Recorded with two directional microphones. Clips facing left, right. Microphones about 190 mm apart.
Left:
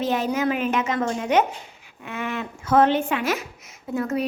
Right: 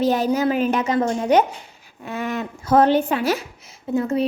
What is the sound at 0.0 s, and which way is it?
A child's voice, 35° right (ahead or behind).